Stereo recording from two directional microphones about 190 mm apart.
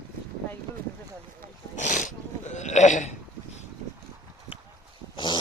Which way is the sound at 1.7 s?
40° left (ahead or behind).